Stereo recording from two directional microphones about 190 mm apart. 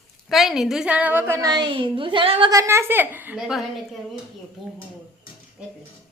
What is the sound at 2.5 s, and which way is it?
A woman's voice, 15° right (ahead or behind).